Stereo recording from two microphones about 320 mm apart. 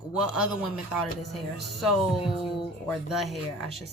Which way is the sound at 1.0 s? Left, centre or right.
Left.